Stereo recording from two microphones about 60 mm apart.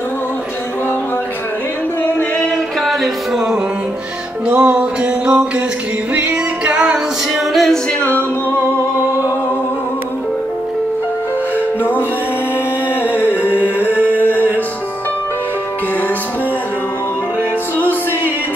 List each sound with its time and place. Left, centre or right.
2.3 s music: centre
2.9 s music: centre
4.5 s a sound: right
6.1 s music: right
7.5 s a capella: centre
8.0 s music: left
13.0 s music: right